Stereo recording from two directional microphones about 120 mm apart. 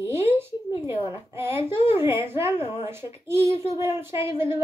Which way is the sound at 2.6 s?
55° left (ahead or behind).